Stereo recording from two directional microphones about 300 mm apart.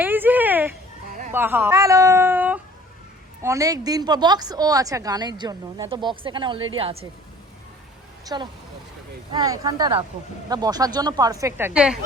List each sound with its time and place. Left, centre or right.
0.0 s a sound: centre
1.3 s a woman's voice: centre
8.2 s a woman's voice: centre